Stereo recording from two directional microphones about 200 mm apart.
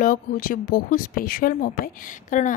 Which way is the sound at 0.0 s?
45° left (ahead or behind).